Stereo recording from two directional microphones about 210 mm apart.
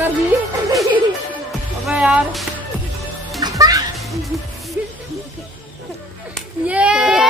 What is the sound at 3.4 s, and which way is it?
Music, 15° right (ahead or behind).